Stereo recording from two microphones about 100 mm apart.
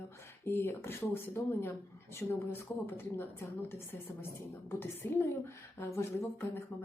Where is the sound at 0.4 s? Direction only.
20° left (ahead or behind).